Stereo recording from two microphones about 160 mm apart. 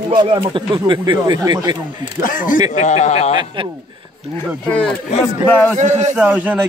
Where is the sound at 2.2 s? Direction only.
60° left (ahead or behind).